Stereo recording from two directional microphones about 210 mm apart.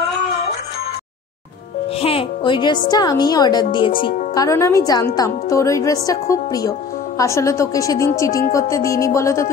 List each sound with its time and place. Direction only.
2.0 s music: 25° left (ahead or behind)
2.9 s a woman's voice: 20° left (ahead or behind)